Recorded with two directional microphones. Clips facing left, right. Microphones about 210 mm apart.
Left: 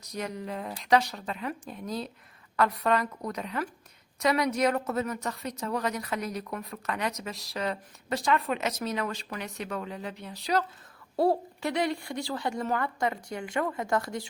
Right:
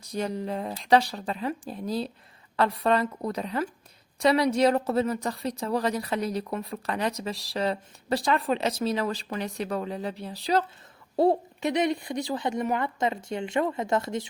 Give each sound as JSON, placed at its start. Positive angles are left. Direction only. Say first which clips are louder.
{"t": 0.0, "sound": "a woman's voice", "louder": "right 5 dB", "side_deg": -30}